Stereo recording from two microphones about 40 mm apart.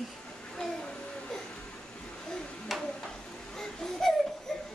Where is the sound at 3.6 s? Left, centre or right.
Centre.